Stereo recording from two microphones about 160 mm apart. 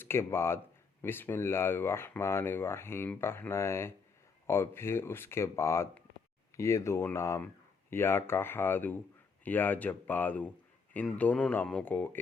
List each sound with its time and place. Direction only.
0.0 s speech: 15° left (ahead or behind)